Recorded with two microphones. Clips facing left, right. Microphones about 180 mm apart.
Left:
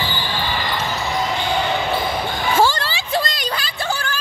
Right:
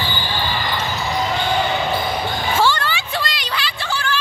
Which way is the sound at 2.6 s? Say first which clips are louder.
Left 2 dB; 40° left (ahead or behind).